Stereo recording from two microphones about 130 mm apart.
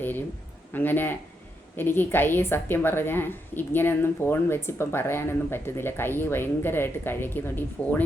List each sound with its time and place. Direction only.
0.0 s a woman's voice: 15° left (ahead or behind)